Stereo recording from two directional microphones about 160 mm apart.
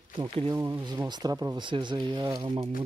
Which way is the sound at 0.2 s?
25° right (ahead or behind).